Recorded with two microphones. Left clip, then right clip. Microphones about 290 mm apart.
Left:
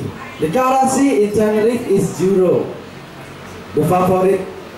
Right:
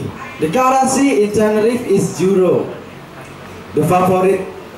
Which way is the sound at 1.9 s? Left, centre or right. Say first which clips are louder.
Right 1 dB; right.